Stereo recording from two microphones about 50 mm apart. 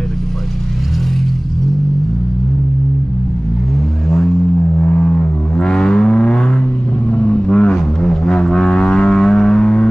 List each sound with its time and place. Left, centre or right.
4.7 s vehicle: left